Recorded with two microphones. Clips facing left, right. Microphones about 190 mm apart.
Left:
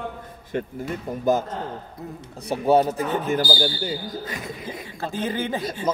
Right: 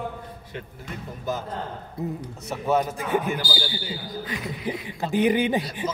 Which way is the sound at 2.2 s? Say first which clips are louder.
Left 5 dB; 30° left (ahead or behind).